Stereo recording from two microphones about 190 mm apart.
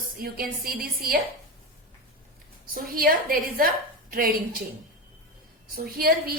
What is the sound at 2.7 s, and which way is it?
Speech, 50° right (ahead or behind).